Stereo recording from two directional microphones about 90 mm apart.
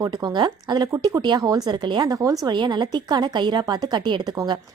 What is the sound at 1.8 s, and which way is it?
Speech, 55° right (ahead or behind).